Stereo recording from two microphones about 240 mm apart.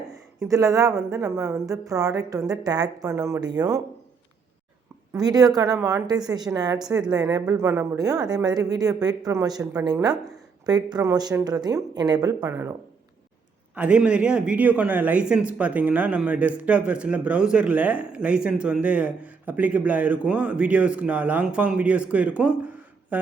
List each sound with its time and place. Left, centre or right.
0.4 s speech: centre
5.1 s speech: centre
13.7 s speech: centre